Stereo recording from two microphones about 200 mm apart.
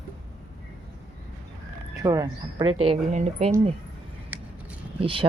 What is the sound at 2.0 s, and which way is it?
Speech, 15° right (ahead or behind).